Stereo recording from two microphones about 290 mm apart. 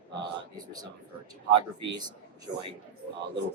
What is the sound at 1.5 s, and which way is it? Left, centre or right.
Speech, right.